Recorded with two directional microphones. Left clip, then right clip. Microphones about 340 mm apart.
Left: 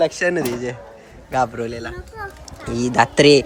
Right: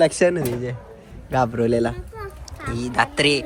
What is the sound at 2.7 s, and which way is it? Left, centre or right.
Speech, centre.